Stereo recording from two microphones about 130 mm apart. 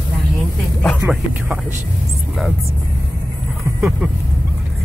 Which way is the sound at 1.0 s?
15° right (ahead or behind).